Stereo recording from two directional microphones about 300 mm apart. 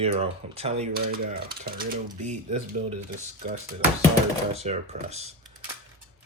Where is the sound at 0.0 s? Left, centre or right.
Centre.